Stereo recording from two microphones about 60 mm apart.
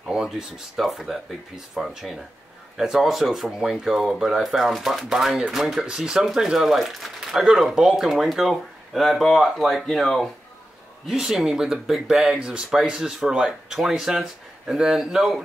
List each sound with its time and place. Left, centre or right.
0.0 s speech: centre
11.1 s speech: centre